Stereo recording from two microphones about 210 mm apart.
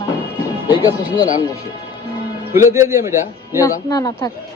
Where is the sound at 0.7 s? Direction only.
20° left (ahead or behind).